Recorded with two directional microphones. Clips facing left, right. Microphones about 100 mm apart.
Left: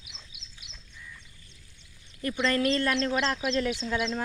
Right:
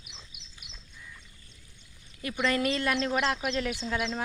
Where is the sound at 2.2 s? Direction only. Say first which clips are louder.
Left 2 dB; 10° right (ahead or behind).